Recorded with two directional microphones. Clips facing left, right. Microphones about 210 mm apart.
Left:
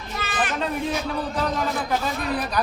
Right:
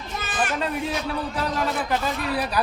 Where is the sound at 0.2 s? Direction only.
45° right (ahead or behind).